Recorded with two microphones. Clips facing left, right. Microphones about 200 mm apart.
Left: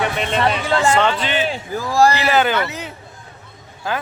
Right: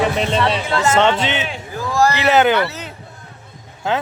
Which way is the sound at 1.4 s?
35° left (ahead or behind).